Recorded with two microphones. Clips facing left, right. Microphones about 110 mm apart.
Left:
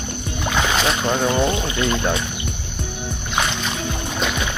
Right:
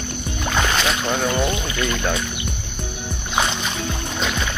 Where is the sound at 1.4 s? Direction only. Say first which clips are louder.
Left 2 dB; 25° left (ahead or behind).